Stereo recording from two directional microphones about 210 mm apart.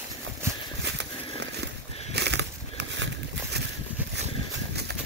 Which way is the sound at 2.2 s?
55° right (ahead or behind).